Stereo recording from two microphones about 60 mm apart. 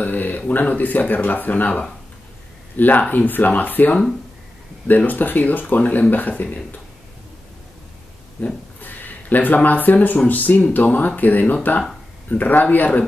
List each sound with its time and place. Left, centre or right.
0.0 s a sound: left
0.5 s speech: left
8.4 s speech: left